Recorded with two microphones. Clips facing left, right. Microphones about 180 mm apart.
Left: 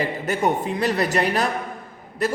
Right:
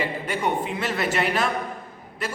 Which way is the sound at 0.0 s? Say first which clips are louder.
Left 4 dB; 45° left (ahead or behind).